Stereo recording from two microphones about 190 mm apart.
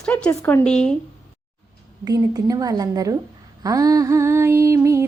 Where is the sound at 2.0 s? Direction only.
20° right (ahead or behind).